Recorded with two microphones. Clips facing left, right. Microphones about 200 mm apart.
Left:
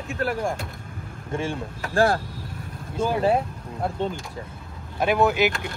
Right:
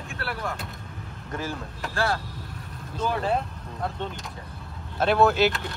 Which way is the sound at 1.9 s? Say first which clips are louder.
Left 7 dB; 50° left (ahead or behind).